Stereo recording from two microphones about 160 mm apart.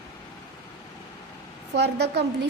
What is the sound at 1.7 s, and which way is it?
Speech, 90° right.